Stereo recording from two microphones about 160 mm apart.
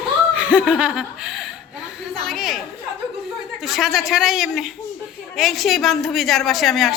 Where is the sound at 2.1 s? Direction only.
Centre (ahead or behind).